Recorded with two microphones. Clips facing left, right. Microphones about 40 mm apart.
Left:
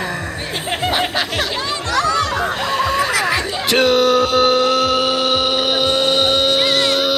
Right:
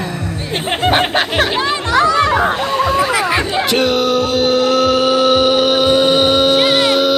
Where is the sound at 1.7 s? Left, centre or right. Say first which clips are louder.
Right 2 dB; right.